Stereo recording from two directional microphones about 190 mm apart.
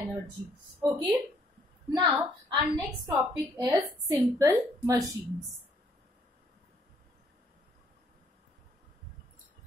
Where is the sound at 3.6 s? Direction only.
20° right (ahead or behind).